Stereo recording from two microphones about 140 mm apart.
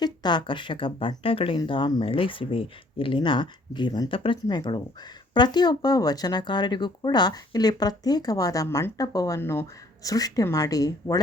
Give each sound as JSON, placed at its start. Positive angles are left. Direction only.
{"t": 0.0, "sound": "speech", "side_deg": 30}